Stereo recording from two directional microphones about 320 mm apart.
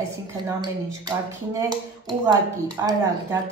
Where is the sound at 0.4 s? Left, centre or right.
Centre.